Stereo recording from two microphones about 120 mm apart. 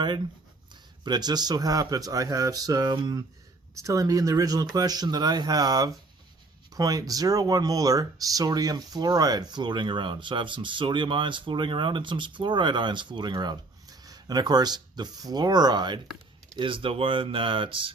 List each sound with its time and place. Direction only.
0.7 s speech: 35° right (ahead or behind)